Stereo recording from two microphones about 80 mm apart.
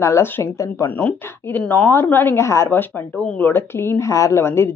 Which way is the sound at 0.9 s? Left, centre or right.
Left.